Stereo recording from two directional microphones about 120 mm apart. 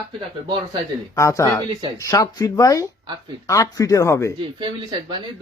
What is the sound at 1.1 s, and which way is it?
Speech, 25° left (ahead or behind).